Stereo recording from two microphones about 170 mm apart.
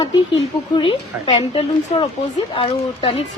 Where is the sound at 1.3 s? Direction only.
30° left (ahead or behind).